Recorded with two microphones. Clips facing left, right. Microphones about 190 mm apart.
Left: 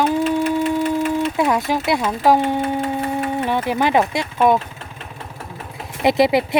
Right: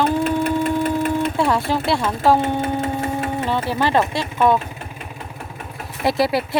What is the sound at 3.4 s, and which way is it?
Speech, 15° left (ahead or behind).